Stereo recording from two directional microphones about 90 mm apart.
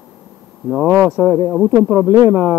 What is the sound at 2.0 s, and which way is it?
Speech, 40° right (ahead or behind).